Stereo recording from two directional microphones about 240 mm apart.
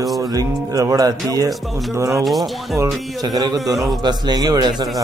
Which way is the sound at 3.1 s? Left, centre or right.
Centre.